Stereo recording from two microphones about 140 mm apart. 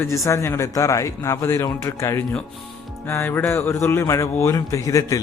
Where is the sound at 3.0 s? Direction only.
15° left (ahead or behind).